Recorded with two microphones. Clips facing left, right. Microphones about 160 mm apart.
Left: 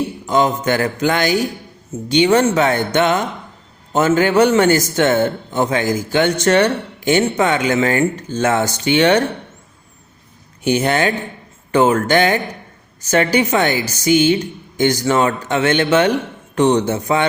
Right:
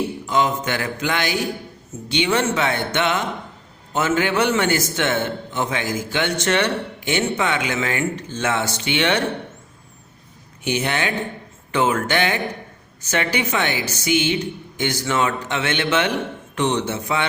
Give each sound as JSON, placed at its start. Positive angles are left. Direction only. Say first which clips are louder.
{"t": 0.3, "sound": "a man's voice", "louder": "left 6 dB", "side_deg": 40}
{"t": 10.6, "sound": "a man's voice", "louder": "left 7 dB", "side_deg": 40}